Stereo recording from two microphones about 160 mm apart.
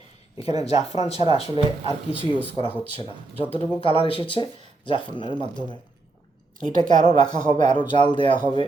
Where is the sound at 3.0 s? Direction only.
30° left (ahead or behind).